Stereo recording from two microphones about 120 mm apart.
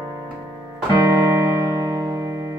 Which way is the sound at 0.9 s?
30° right (ahead or behind).